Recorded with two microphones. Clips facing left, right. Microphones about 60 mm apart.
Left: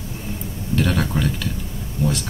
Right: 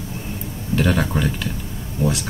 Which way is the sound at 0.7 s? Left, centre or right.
Centre.